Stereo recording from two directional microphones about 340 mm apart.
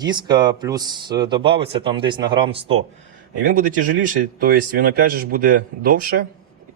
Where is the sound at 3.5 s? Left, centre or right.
Right.